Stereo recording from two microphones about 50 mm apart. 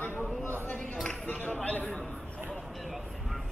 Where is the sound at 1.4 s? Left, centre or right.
Left.